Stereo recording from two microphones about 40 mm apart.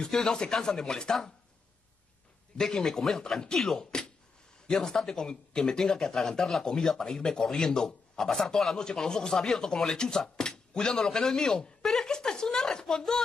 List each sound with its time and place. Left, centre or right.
0.0 s speech: centre
2.5 s speech: centre